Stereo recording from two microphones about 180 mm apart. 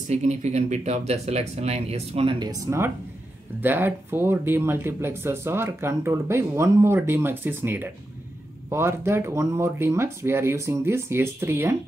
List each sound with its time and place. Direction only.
0.1 s speech: 40° right (ahead or behind); by 11.7 s 10° right (ahead or behind)